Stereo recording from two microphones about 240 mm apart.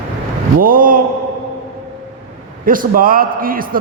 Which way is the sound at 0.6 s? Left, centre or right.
Right.